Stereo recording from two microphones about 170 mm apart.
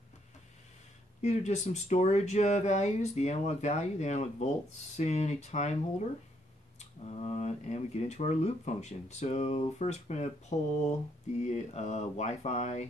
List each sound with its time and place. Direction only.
1.2 s speech: 40° left (ahead or behind)